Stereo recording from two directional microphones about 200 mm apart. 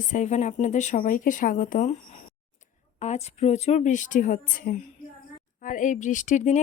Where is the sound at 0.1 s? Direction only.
35° left (ahead or behind).